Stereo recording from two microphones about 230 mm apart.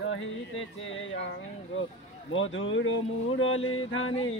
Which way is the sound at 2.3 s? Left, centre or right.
Left.